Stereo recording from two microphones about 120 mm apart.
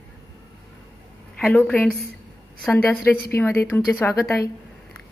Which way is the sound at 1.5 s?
15° left (ahead or behind).